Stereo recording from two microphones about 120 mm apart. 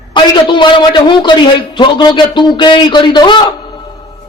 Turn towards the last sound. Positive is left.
turn(degrees=40)  # may be behind; listen again after turning